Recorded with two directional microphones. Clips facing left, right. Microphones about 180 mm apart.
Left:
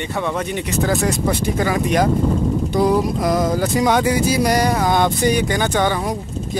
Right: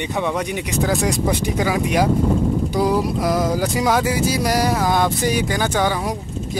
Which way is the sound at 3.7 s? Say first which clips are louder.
Left 2 dB; 5° right (ahead or behind).